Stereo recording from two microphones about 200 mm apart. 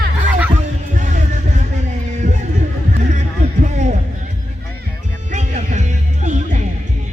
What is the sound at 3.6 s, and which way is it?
Heart sounds, 35° right (ahead or behind).